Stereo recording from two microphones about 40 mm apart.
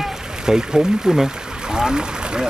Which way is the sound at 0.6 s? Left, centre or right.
Centre.